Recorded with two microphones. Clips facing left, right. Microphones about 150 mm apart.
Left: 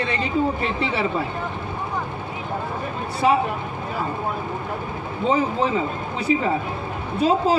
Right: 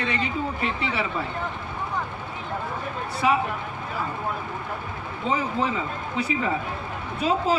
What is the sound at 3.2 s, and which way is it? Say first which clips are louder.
Speech: left 4 dB; 30° left (ahead or behind).